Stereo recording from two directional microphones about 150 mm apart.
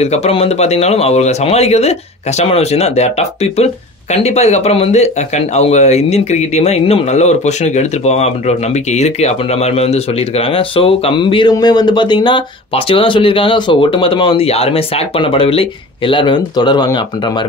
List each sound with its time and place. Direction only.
0.0 s speech: 45° left (ahead or behind); by 17.0 s 30° left (ahead or behind)